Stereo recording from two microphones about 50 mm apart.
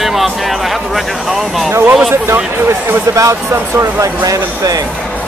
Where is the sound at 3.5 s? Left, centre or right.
Right.